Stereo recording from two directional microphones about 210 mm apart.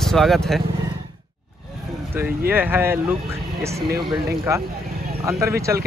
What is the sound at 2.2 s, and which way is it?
Speech, 10° right (ahead or behind).